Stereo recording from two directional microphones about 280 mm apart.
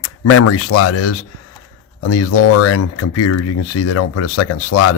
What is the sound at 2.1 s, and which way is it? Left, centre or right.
Speech, left.